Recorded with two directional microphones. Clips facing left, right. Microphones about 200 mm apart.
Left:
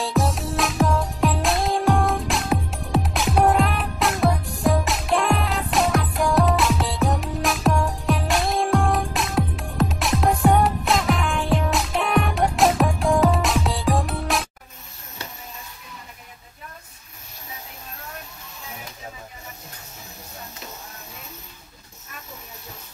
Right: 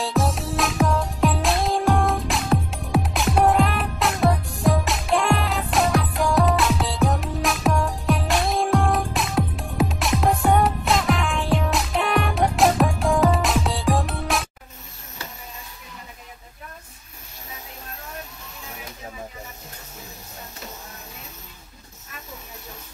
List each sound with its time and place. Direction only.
0.0 s music: centre (ahead or behind)